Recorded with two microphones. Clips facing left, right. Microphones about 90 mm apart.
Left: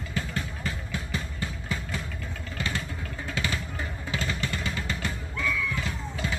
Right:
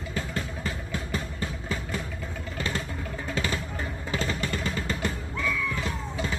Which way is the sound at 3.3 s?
35° right (ahead or behind).